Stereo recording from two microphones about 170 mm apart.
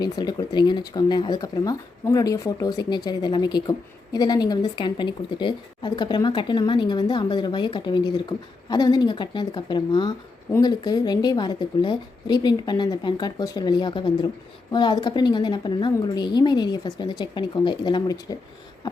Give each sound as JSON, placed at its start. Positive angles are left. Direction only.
{"t": 0.0, "sound": "speech", "side_deg": 25}